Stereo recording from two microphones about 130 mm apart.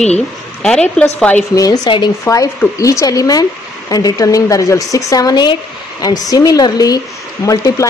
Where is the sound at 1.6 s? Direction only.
35° left (ahead or behind).